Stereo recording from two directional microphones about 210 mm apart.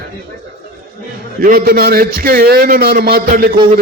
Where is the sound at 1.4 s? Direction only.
45° right (ahead or behind).